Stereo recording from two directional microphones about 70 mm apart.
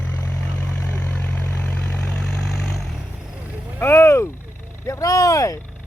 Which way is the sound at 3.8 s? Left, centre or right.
Left.